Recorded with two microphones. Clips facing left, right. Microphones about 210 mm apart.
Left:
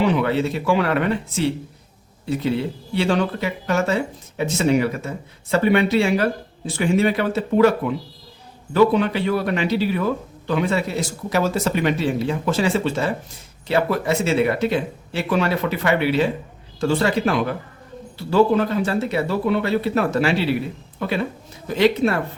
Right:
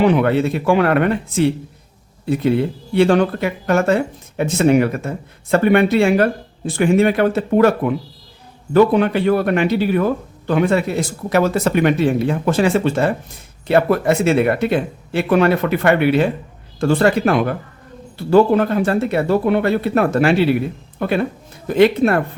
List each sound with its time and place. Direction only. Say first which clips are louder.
0.0 s speech: right 5 dB; 55° right (ahead or behind)